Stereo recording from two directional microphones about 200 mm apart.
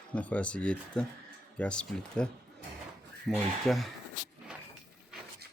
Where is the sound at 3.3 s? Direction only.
Centre (ahead or behind).